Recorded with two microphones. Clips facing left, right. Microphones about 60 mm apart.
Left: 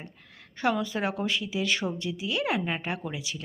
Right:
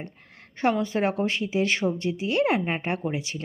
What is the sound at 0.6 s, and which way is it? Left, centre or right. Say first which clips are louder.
Speech: right 4 dB; right.